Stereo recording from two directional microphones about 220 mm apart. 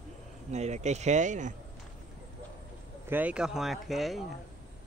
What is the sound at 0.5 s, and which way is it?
Speech, 30° right (ahead or behind).